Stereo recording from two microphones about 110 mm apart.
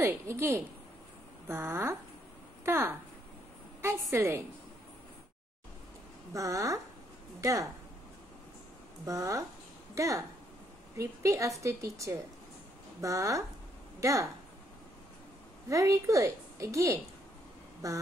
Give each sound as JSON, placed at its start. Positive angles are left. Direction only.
{"t": 0.0, "sound": "a woman's voice", "side_deg": -25}
{"t": 6.3, "sound": "a woman's voice", "side_deg": -30}
{"t": 9.0, "sound": "a woman's voice", "side_deg": -30}
{"t": 15.7, "sound": "a woman's voice", "side_deg": -30}
{"t": 17.8, "sound": "a sound", "side_deg": -30}